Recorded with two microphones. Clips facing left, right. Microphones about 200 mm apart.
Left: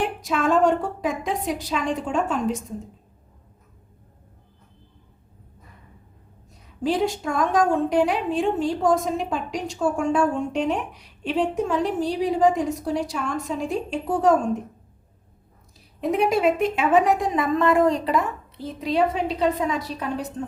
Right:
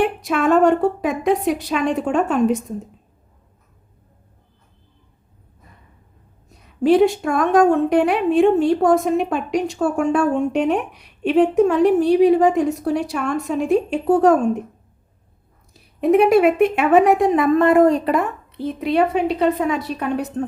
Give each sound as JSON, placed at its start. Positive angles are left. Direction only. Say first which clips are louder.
{"t": 0.0, "sound": "a woman's voice", "louder": "right 5 dB", "side_deg": -65}
{"t": 6.8, "sound": "a woman's voice", "louder": "right 9 dB", "side_deg": -65}
{"t": 16.0, "sound": "a woman's voice", "louder": "right 8 dB", "side_deg": -65}